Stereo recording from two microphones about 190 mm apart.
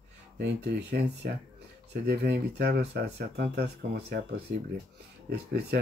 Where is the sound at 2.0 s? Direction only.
60° right (ahead or behind).